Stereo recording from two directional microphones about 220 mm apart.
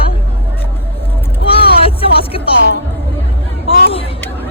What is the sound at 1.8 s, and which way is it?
Music, 25° left (ahead or behind).